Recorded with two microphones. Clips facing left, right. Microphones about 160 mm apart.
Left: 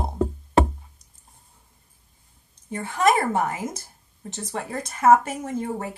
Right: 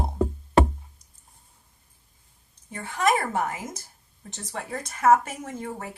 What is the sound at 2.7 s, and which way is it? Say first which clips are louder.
A woman's voice: left 3 dB; 30° left (ahead or behind).